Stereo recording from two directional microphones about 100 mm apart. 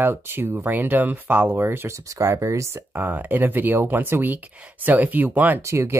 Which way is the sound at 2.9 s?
20° right (ahead or behind).